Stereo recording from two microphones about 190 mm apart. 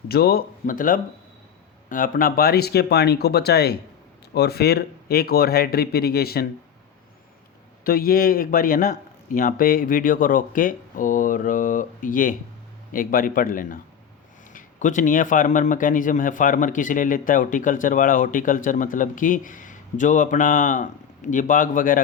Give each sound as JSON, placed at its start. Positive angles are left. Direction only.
{"t": 0.1, "sound": "speech", "side_deg": 55}
{"t": 7.9, "sound": "speech", "side_deg": 50}